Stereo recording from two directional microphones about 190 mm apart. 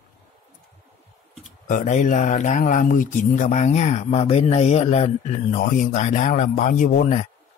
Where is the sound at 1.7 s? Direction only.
40° left (ahead or behind).